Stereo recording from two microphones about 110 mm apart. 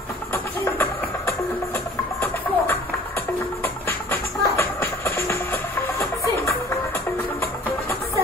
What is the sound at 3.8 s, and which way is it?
Music, 25° left (ahead or behind).